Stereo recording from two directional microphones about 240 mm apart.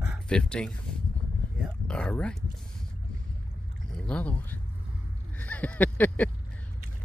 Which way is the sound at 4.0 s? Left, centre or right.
Centre.